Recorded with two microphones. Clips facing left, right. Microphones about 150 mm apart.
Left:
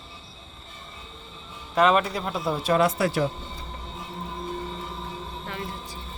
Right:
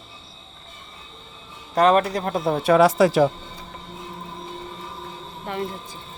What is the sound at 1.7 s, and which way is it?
Speech, 40° right (ahead or behind).